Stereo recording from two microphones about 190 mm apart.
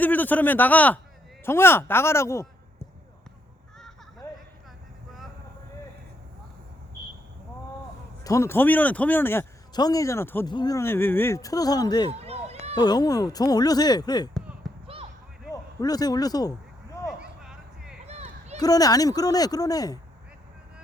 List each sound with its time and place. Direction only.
0.0 s a man's voice: 10° left (ahead or behind)
4.2 s a sound: 15° left (ahead or behind)
8.2 s speech: 15° left (ahead or behind)
12.2 s run: 30° right (ahead or behind)
12.7 s speech: 20° left (ahead or behind)
14.6 s basketball bounce: centre (ahead or behind)
15.5 s a man's voice: 20° left (ahead or behind)
17.1 s a sound: 5° right (ahead or behind)
18.0 s a sound: 35° right (ahead or behind)
18.6 s speech: 20° left (ahead or behind)